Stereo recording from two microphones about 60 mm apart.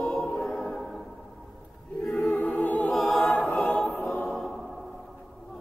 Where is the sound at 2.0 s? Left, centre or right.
Centre.